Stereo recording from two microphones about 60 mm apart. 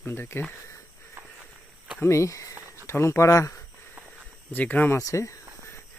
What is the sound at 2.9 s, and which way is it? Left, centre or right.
Speech, left.